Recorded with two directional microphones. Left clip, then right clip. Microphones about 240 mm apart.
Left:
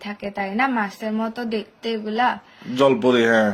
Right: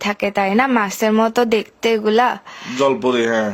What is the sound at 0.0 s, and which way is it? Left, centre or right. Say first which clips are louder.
Speech: right 10 dB; right.